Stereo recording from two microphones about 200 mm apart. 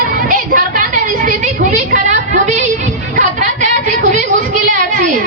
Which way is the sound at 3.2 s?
40° right (ahead or behind).